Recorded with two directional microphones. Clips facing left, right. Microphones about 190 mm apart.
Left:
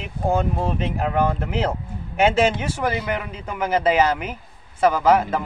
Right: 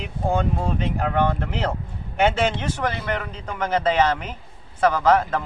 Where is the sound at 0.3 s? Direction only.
5° left (ahead or behind).